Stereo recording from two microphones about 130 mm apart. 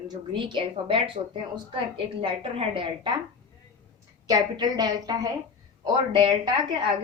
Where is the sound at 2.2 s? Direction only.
40° right (ahead or behind).